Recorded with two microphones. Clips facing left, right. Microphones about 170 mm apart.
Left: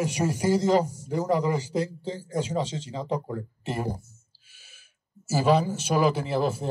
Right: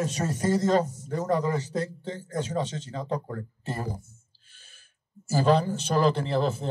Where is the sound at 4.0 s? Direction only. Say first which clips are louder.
Right 2 dB; 5° left (ahead or behind).